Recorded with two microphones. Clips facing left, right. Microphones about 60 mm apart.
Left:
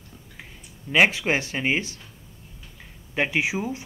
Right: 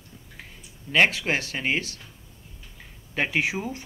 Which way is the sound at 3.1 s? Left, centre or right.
Centre.